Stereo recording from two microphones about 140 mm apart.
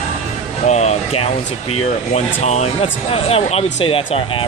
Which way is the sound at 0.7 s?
50° left (ahead or behind).